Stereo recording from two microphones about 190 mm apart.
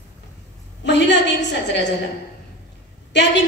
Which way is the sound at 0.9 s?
65° left (ahead or behind).